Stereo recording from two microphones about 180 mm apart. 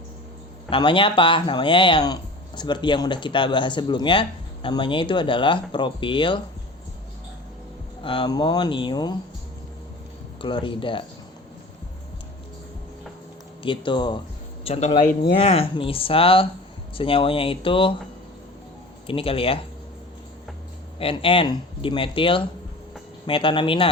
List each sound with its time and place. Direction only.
0.7 s speech: 25° left (ahead or behind)
8.0 s speech: 25° left (ahead or behind)
10.4 s speech: 25° left (ahead or behind)
13.6 s speech: 25° left (ahead or behind)
19.0 s speech: 30° left (ahead or behind)
21.0 s speech: 30° left (ahead or behind)